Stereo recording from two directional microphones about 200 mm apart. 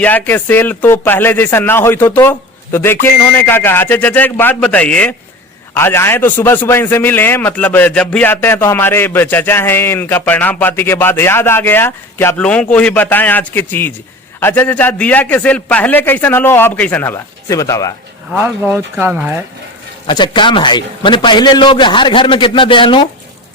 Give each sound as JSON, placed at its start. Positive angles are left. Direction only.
{"t": 0.0, "sound": "a man's voice", "side_deg": 10}
{"t": 18.3, "sound": "speech", "side_deg": -10}
{"t": 20.1, "sound": "a man's voice", "side_deg": 25}